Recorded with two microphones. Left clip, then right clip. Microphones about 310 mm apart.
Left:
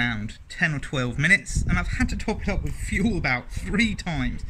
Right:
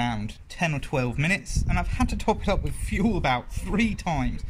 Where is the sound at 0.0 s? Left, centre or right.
Centre.